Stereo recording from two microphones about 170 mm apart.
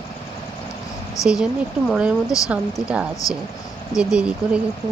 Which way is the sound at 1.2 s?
20° left (ahead or behind).